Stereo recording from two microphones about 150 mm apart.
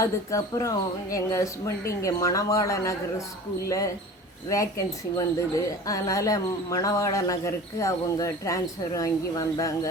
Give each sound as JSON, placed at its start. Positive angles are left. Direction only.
{"t": 0.0, "sound": "a man's voice", "side_deg": 20}
{"t": 4.4, "sound": "a man's voice", "side_deg": 20}